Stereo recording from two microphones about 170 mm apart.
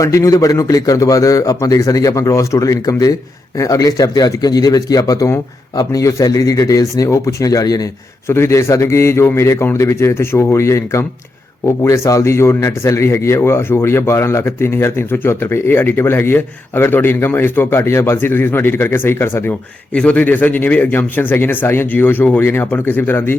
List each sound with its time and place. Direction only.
0.0 s a man's voice: 20° left (ahead or behind)